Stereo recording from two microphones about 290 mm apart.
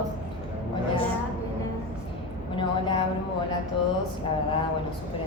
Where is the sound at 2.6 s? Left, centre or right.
Centre.